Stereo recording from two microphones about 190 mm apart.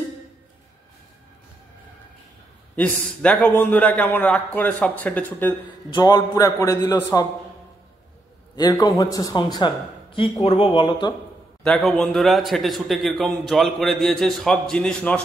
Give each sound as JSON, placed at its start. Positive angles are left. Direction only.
{"t": 2.7, "sound": "a man's voice", "side_deg": 5}
{"t": 5.9, "sound": "a man's voice", "side_deg": 20}
{"t": 8.5, "sound": "a man's voice", "side_deg": 20}
{"t": 11.6, "sound": "a man's voice", "side_deg": 5}